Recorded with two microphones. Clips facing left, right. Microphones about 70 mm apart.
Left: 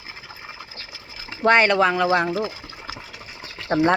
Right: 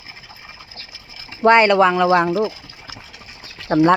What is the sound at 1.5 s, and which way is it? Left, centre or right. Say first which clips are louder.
Speech: right 4 dB; centre.